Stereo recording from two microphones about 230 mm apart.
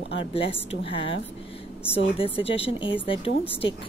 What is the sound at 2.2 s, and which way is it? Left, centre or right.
Speech, left.